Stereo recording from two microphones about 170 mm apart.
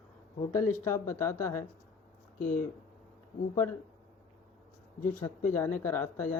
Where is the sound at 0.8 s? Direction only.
15° left (ahead or behind).